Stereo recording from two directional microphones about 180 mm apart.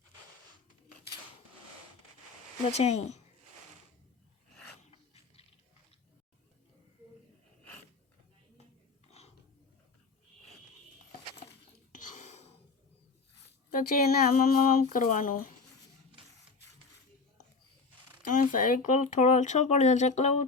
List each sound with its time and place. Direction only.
2.7 s speech: 40° left (ahead or behind)
4.9 s a sound: 35° left (ahead or behind)
9.0 s dog: 35° left (ahead or behind)
11.9 s whispering: 45° left (ahead or behind)
13.7 s speech: 50° left (ahead or behind)
18.3 s speech: 45° left (ahead or behind)